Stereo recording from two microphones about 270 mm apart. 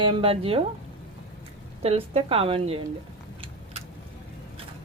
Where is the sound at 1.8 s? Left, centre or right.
Right.